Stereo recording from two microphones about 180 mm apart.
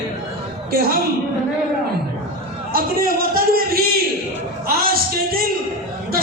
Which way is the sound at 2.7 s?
55° right (ahead or behind).